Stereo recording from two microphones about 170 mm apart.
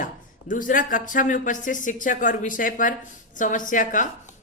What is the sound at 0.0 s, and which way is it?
Speech, 50° left (ahead or behind).